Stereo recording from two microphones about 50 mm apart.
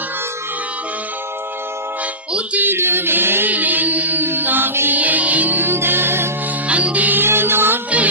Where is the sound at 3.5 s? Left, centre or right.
Right.